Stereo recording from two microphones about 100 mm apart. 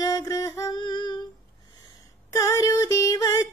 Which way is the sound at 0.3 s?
35° left (ahead or behind).